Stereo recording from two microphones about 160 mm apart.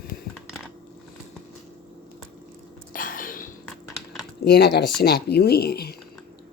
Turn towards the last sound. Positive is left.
turn(degrees=80)